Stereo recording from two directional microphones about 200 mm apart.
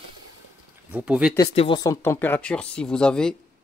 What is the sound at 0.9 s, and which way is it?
Speech, 5° right (ahead or behind).